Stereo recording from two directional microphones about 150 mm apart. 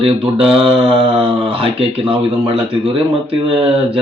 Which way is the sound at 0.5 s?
40° right (ahead or behind).